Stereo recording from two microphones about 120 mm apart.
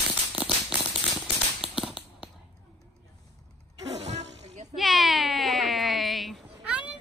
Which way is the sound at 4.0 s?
70° right (ahead or behind).